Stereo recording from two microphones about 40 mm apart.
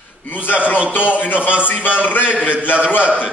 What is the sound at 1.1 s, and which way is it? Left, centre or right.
A man's voice, left.